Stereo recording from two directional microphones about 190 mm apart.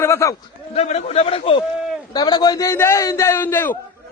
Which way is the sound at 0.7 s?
35° left (ahead or behind).